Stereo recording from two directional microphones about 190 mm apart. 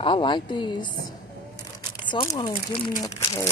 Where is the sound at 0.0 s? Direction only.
25° left (ahead or behind).